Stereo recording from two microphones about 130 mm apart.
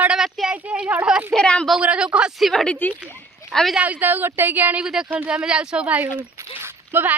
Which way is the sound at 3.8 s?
15° right (ahead or behind).